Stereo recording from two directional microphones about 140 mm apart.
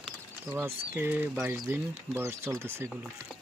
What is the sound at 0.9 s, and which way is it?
Speech, 15° right (ahead or behind).